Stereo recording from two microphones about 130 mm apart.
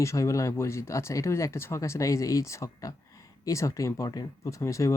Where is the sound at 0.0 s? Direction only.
25° left (ahead or behind).